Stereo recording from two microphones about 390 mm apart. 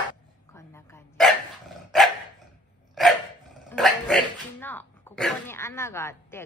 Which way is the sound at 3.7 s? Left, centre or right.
Centre.